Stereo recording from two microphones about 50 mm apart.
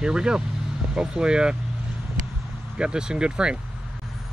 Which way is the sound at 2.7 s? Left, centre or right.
Centre.